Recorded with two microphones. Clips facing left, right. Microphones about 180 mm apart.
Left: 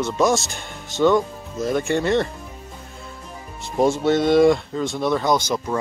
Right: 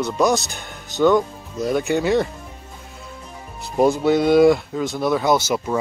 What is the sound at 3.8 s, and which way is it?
Speech, centre (ahead or behind).